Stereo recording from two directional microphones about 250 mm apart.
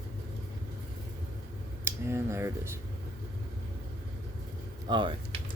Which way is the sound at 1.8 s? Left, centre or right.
Centre.